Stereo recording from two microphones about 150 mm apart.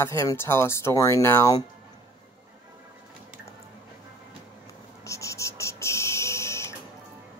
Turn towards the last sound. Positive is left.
turn(degrees=20)  # may be behind; listen again after turning